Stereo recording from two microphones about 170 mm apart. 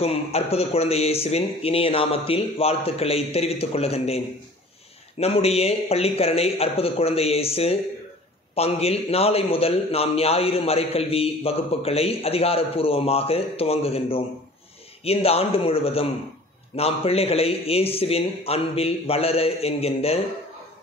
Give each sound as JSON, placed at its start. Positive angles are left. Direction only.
{"t": 0.0, "sound": "a man's voice", "side_deg": 35}
{"t": 5.2, "sound": "a man's voice", "side_deg": 35}